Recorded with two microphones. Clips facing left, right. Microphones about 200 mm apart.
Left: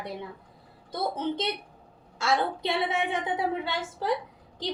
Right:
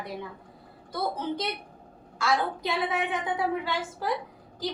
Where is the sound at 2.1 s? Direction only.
25° left (ahead or behind).